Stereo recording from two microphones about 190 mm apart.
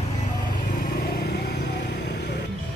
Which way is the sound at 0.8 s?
55° left (ahead or behind).